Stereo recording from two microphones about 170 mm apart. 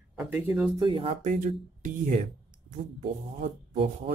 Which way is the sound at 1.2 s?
50° right (ahead or behind).